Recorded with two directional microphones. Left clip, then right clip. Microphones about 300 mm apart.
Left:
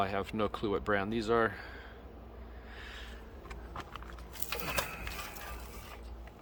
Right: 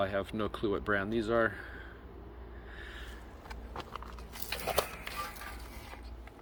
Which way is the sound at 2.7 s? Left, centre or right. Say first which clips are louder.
Even; centre.